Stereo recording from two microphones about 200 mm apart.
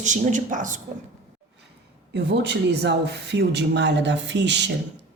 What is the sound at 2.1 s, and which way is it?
Speech, 60° right (ahead or behind).